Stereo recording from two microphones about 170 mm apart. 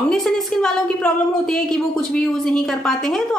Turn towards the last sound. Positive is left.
turn(degrees=5)  # may be behind; listen again after turning